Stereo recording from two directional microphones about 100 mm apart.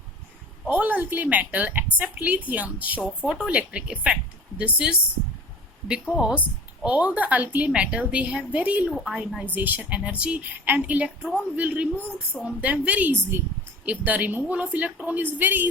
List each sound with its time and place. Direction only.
0.7 s a woman's voice: 15° right (ahead or behind); by 9.4 s centre (ahead or behind)
9.4 s a woman's voice: 20° right (ahead or behind)